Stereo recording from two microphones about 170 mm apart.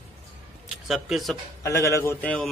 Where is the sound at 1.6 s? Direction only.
15° left (ahead or behind).